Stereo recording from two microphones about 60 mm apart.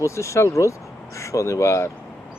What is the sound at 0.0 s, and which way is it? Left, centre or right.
Speech, left.